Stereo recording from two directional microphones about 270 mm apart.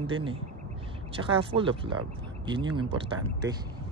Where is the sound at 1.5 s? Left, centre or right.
Centre.